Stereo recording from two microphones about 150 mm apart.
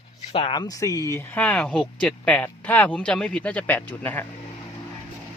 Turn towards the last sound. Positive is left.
turn(degrees=10)  # may be behind; listen again after turning